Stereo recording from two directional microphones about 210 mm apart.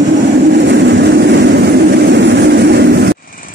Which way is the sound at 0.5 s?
55° right (ahead or behind).